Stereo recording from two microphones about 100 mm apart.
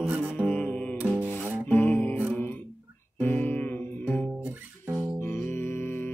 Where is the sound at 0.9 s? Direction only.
10° right (ahead or behind).